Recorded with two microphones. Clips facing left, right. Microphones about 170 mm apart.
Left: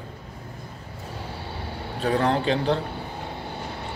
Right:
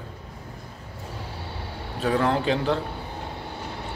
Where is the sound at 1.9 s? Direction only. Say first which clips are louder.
Even; 35° left (ahead or behind).